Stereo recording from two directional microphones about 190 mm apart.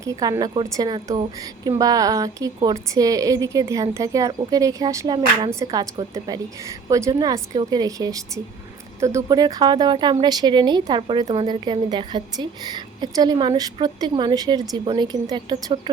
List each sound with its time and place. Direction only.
0.0 s speech: 20° right (ahead or behind)